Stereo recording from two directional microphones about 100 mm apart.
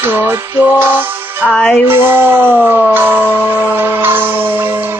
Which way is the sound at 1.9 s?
25° right (ahead or behind).